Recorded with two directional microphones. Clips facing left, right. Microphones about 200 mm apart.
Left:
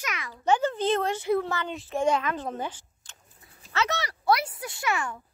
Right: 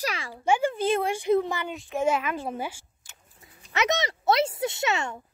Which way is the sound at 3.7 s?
20° right (ahead or behind).